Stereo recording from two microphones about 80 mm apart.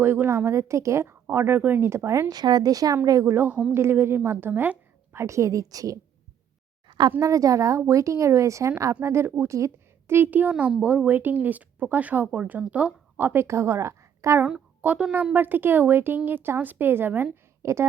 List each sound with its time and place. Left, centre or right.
0.0 s speech: right
1.9 s a woman's voice: right
2.3 s a woman's voice: right
3.2 s speech: right
3.5 s speech: centre
3.8 s a woman's voice: right
5.2 s a woman's voice: right
6.8 s a sound: right
7.2 s a woman's voice: right
10.5 s a woman's voice: centre; by 14.4 s right
14.8 s a woman's voice: right
17.6 s speech: right